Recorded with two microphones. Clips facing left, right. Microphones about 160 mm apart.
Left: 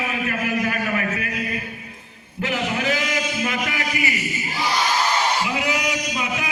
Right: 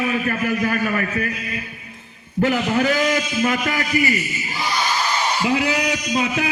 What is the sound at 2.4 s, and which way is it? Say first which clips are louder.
A man's voice: right 6 dB; 40° right (ahead or behind).